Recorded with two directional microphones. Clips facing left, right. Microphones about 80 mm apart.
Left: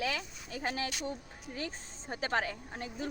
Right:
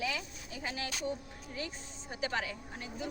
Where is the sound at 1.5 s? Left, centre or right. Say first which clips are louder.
Left 1 dB; left.